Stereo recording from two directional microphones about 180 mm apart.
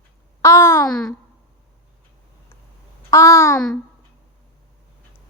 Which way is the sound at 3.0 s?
15° left (ahead or behind).